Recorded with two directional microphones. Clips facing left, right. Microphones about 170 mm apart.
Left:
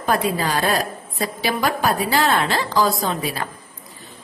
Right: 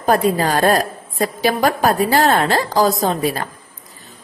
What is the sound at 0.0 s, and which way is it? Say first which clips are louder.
A woman's voice: right 5 dB; 45° right (ahead or behind).